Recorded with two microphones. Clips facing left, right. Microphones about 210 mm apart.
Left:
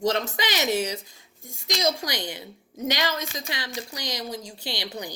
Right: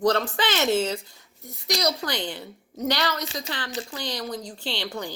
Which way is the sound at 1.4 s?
45° left (ahead or behind).